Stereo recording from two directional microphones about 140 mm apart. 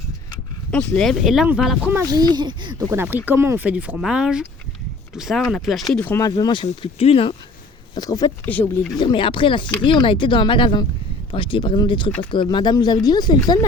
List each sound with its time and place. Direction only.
0.7 s speech: 5° left (ahead or behind)
2.1 s speech: 30° right (ahead or behind)
2.9 s speech: 15° right (ahead or behind)
6.0 s speech: 15° left (ahead or behind)
6.2 s speech: 30° left (ahead or behind)
7.9 s speech: 30° left (ahead or behind)
8.4 s speech: 10° left (ahead or behind)
9.0 s speech: 35° left (ahead or behind)